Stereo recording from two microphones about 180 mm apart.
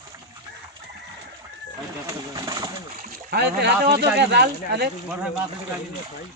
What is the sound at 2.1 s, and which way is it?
Pigeon, 20° right (ahead or behind).